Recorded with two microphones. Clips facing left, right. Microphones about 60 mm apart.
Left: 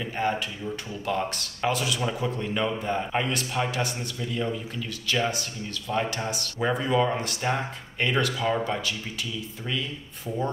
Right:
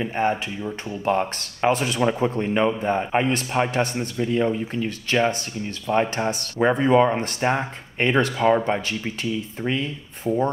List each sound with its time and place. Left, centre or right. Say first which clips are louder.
0.0 s speech: right 5 dB; right